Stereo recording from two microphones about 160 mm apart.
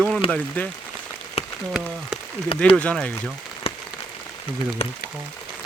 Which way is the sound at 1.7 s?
5° right (ahead or behind).